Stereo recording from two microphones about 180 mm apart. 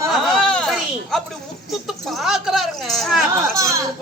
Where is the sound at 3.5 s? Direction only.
20° right (ahead or behind).